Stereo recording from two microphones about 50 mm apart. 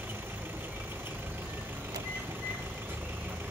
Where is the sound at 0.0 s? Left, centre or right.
Right.